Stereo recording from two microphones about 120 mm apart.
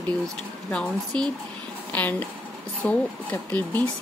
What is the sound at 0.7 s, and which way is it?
Speech, 5° left (ahead or behind).